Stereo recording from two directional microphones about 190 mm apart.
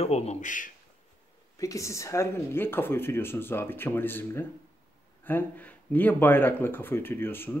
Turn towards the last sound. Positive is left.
turn(degrees=10)  # may be behind; listen again after turning